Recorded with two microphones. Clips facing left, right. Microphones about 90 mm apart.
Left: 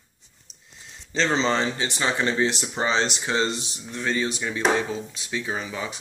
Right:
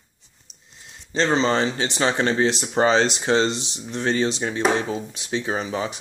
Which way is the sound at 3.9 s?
70° right (ahead or behind).